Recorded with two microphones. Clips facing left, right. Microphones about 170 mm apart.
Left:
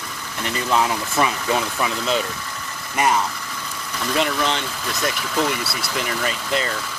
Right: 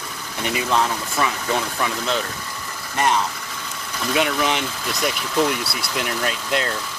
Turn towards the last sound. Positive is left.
turn(degrees=0)  # may be behind; listen again after turning